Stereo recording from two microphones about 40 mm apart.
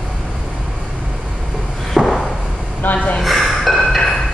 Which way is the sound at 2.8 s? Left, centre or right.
Left.